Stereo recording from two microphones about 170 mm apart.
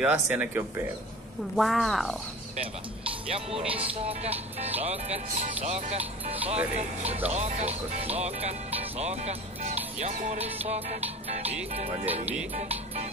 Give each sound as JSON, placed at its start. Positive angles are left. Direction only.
{"t": 0.0, "sound": "speech", "side_deg": -5}
{"t": 3.1, "sound": "speech", "side_deg": -35}
{"t": 3.7, "sound": "music", "side_deg": -35}
{"t": 7.2, "sound": "speech", "side_deg": -40}
{"t": 10.1, "sound": "music", "side_deg": -45}
{"t": 11.5, "sound": "speech", "side_deg": -10}